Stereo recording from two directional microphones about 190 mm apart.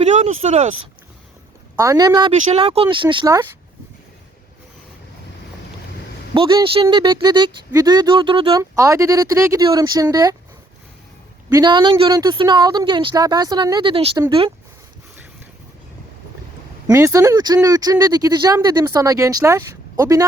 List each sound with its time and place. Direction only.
0.0 s speech: 40° right (ahead or behind)
1.7 s speech: 15° right (ahead or behind)
6.3 s speech: 25° right (ahead or behind)
8.7 s speech: 15° right (ahead or behind)
11.4 s speech: 20° right (ahead or behind)
16.8 s speech: 15° right (ahead or behind)